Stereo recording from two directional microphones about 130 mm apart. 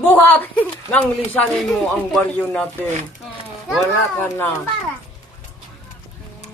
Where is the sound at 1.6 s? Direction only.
Centre (ahead or behind).